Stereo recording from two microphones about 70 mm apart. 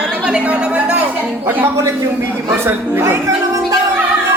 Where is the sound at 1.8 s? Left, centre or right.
Right.